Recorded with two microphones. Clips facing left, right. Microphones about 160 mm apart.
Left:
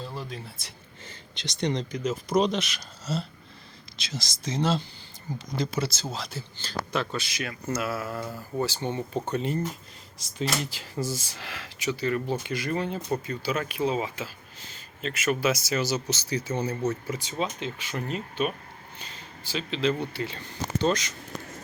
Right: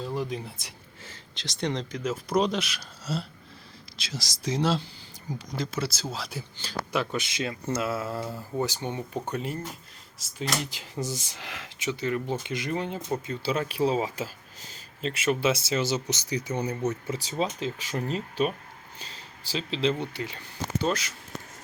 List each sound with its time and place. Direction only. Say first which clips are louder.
0.0 s speech: right 6 dB; 15° right (ahead or behind)
1.0 s speech: left 2 dB; centre (ahead or behind)
7.3 s speech: right 2 dB; 25° right (ahead or behind)
8.2 s speech: right 1 dB; centre (ahead or behind)
8.5 s speech: left 1 dB; 15° right (ahead or behind)
10.6 s speech: left 2 dB; 15° right (ahead or behind)
17.2 s speech: right 1 dB; 35° right (ahead or behind); by 21.2 s 5° right (ahead or behind)